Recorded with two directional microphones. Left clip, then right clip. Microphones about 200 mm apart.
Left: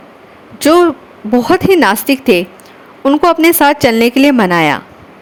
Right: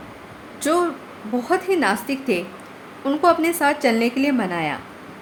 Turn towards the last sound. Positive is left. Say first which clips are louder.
# left 13 dB
turn(degrees=50)  # may be behind; listen again after turning